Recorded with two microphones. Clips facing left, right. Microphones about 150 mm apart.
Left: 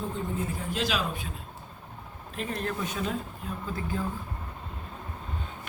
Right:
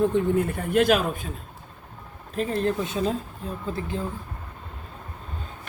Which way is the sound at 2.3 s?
35° right (ahead or behind).